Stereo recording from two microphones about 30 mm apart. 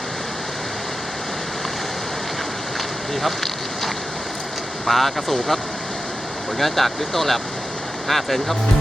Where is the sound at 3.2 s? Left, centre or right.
Centre.